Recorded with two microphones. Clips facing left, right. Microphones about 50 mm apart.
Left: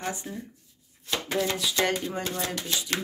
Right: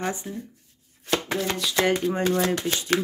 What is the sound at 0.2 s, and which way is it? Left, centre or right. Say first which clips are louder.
Speech: right 3 dB; centre.